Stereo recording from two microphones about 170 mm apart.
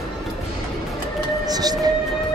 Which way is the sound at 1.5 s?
25° right (ahead or behind).